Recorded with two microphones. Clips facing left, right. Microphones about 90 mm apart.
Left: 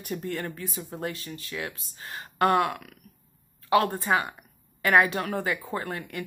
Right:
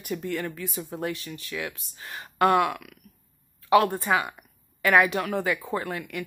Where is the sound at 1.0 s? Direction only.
30° left (ahead or behind).